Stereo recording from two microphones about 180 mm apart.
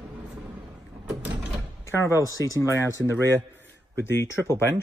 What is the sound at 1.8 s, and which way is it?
Speech, 15° left (ahead or behind).